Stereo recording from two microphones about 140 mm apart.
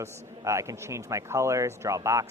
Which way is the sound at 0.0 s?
20° right (ahead or behind).